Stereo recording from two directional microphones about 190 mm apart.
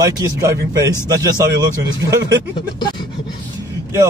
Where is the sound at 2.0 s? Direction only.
20° right (ahead or behind).